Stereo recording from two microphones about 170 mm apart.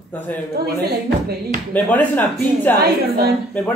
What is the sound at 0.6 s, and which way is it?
Speech, 65° right (ahead or behind).